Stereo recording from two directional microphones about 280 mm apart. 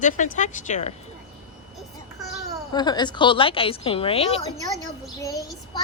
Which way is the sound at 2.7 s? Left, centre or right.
Centre.